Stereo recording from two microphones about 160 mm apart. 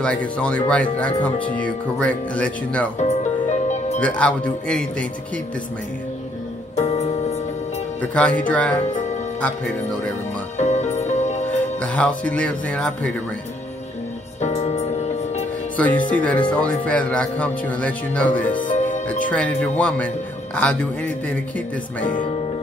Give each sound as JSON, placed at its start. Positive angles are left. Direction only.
{"t": 0.0, "sound": "speech", "side_deg": 5}
{"t": 3.0, "sound": "music", "side_deg": 45}
{"t": 4.0, "sound": "speech", "side_deg": 10}
{"t": 6.7, "sound": "music", "side_deg": 40}
{"t": 8.0, "sound": "speech", "side_deg": 10}
{"t": 10.6, "sound": "music", "side_deg": 45}
{"t": 11.4, "sound": "speech", "side_deg": 10}
{"t": 14.4, "sound": "music", "side_deg": 40}
{"t": 15.7, "sound": "speech", "side_deg": 10}
{"t": 18.6, "sound": "music", "side_deg": 50}
{"t": 19.0, "sound": "speech", "side_deg": 10}